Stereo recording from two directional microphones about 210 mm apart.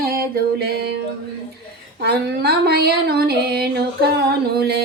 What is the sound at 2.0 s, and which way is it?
Speech, 50° right (ahead or behind).